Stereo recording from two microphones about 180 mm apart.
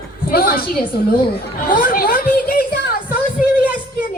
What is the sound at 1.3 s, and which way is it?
Chatter, 55° left (ahead or behind).